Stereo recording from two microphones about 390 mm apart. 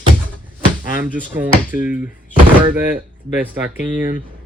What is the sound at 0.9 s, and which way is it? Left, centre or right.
Speech, centre.